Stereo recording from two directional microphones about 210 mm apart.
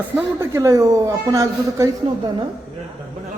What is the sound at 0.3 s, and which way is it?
A man's voice, 15° right (ahead or behind).